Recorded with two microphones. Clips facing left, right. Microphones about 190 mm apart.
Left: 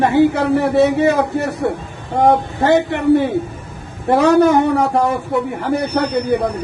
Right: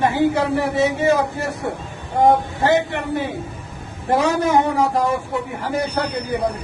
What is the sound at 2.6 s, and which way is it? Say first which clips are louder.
Speech: left 6 dB; 60° left (ahead or behind).